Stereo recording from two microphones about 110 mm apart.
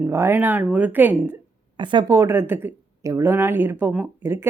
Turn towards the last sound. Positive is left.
turn(degrees=-20)  # may be behind; listen again after turning